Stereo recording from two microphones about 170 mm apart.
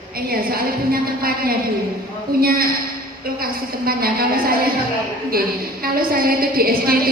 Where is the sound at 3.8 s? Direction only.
60° right (ahead or behind).